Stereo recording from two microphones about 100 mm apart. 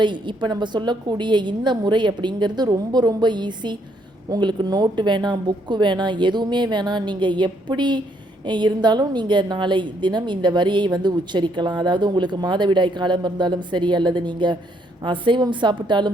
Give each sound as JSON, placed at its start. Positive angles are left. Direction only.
{"t": 0.0, "sound": "a woman's voice", "side_deg": -50}